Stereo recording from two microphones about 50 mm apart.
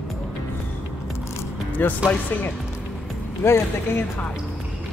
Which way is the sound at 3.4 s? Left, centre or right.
Left.